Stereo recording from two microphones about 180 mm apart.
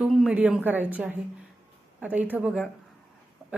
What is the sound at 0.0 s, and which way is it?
A woman's voice, 5° right (ahead or behind).